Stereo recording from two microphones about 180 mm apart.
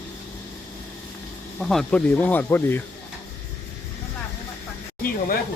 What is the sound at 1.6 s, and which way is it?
Speech, centre (ahead or behind).